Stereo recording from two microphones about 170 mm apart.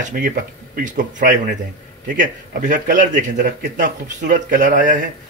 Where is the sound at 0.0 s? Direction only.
50° right (ahead or behind).